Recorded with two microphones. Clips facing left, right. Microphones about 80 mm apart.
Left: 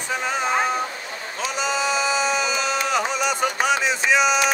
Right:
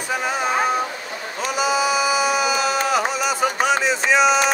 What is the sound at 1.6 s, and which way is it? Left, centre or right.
Music, centre.